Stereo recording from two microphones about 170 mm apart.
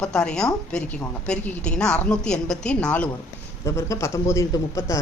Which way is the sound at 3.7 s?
15° left (ahead or behind).